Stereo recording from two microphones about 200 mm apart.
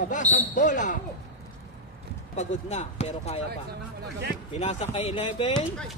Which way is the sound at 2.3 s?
35° left (ahead or behind).